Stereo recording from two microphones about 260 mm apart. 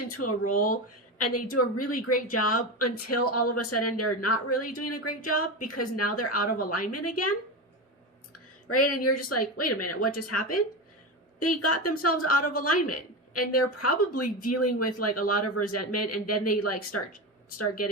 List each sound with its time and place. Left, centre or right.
0.1 s speech: left
0.5 s speech: left
1.2 s speech: left
8.3 s speech: left
11.6 s a woman's voice: left